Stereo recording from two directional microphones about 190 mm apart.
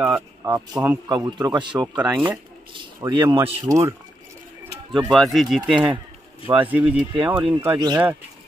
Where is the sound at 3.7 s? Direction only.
15° right (ahead or behind).